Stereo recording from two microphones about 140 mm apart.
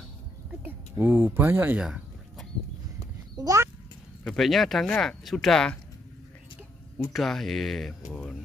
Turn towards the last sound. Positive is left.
turn(degrees=0)  # may be behind; listen again after turning